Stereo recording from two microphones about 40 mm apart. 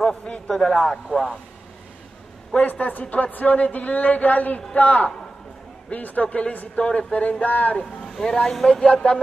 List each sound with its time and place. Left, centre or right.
0.5 s speech: centre
1.1 s speech: centre
2.6 s speech: left
6.2 s speech: left
7.8 s speech: centre
8.9 s speech: left